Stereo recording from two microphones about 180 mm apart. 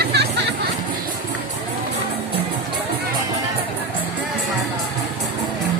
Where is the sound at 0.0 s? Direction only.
65° right (ahead or behind).